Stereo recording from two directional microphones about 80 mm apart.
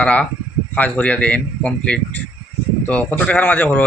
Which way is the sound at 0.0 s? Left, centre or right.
Centre.